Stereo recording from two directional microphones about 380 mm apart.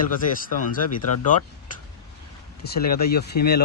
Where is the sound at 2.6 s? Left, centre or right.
Left.